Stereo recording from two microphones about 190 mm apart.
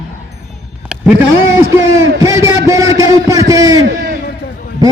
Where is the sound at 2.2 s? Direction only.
15° right (ahead or behind).